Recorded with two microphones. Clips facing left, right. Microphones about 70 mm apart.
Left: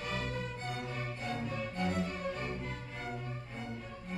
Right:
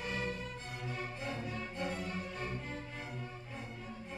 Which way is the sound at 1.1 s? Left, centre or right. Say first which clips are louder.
Left 2 dB; centre.